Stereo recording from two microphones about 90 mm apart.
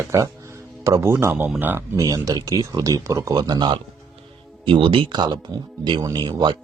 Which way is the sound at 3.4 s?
55° right (ahead or behind).